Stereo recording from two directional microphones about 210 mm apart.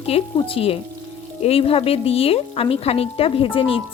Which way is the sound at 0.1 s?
30° left (ahead or behind).